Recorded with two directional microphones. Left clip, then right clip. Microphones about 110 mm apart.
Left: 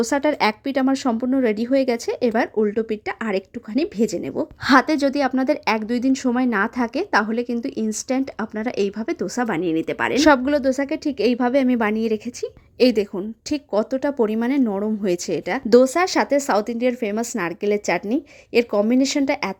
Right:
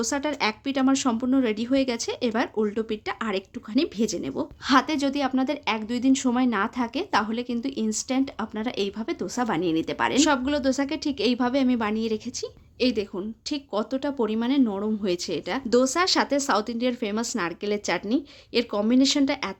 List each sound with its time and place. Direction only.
0.0 s speech: 55° left (ahead or behind)
4.6 s a woman's voice: 60° left (ahead or behind)
9.5 s speech: 30° left (ahead or behind)
10.2 s speech: 70° left (ahead or behind)
10.4 s speech: 40° left (ahead or behind)
12.8 s a woman's voice: 60° left (ahead or behind)
13.5 s speech: 50° left (ahead or behind)